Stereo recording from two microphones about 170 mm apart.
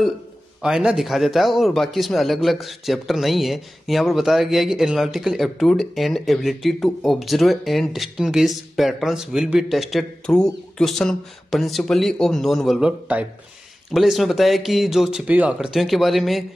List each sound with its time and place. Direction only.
0.6 s a man's voice: 5° right (ahead or behind)